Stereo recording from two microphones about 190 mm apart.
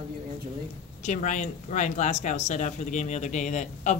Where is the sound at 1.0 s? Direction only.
40° left (ahead or behind).